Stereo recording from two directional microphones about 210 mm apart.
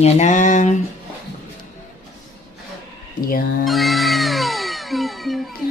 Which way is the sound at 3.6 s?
Centre (ahead or behind).